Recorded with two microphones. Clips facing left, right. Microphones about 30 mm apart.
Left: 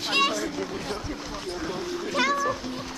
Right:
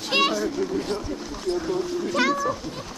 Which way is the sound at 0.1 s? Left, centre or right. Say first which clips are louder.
Right 2 dB; centre.